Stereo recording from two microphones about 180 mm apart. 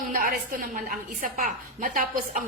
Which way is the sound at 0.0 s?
45° right (ahead or behind).